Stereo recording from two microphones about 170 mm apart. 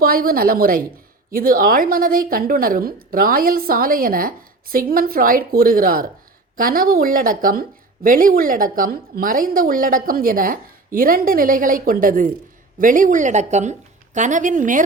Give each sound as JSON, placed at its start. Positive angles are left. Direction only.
{"t": 0.0, "sound": "a woman's voice", "side_deg": -60}